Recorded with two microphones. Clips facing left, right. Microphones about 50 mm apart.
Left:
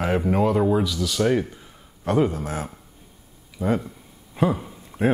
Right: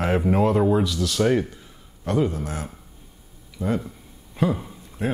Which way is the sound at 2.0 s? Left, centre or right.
Left.